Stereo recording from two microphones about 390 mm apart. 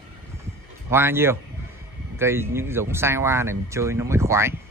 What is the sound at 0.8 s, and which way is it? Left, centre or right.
Speech, centre.